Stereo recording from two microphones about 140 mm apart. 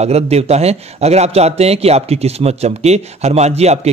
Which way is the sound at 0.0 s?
50° right (ahead or behind).